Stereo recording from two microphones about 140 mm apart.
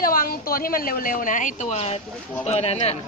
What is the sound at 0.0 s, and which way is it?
A woman's voice, 90° left.